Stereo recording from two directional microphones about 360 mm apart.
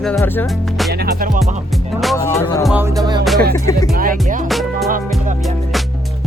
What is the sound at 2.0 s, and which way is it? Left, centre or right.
Music, centre.